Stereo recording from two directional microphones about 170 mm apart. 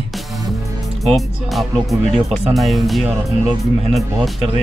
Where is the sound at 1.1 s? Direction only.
Centre (ahead or behind).